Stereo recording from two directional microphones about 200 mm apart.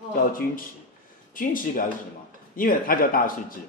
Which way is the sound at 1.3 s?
45° left (ahead or behind).